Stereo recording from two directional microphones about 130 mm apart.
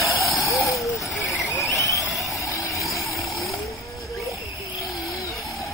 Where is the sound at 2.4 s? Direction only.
25° left (ahead or behind).